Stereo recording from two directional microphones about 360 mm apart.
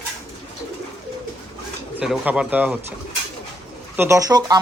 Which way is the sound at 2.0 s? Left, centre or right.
Centre.